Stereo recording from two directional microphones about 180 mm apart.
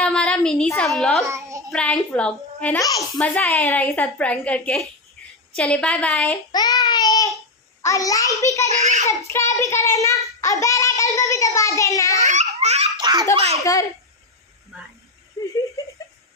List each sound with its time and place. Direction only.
0.0 s a woman's voice: 5° left (ahead or behind)
1.2 s child singing: 15° right (ahead or behind)
1.7 s a woman's voice: 5° left (ahead or behind)
2.8 s a child's voice: 20° left (ahead or behind)
3.2 s a child's voice: 5° left (ahead or behind)
6.5 s a sound: 20° left (ahead or behind)
7.8 s a child's voice: 20° left (ahead or behind)
8.6 s a child's voice: 40° right (ahead or behind)
9.0 s a child's voice: 15° left (ahead or behind)
12.2 s babbling: 40° right (ahead or behind)
12.9 s a child's voice: 20° right (ahead or behind)
13.6 s a child's voice: 20° left (ahead or behind)
15.4 s giggle: 15° left (ahead or behind)